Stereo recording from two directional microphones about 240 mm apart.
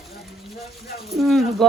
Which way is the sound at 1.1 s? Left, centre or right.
Centre.